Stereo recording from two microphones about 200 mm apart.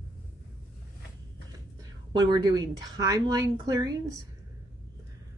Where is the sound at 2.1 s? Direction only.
20° right (ahead or behind).